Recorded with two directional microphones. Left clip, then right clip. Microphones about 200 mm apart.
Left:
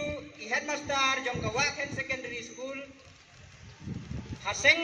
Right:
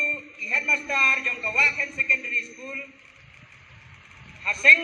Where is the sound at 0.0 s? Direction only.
20° right (ahead or behind).